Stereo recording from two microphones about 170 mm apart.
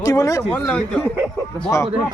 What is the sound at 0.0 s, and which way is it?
Speech, 20° left (ahead or behind).